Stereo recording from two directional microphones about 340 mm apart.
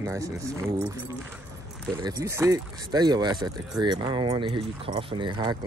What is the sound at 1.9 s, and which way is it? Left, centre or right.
Speech, centre.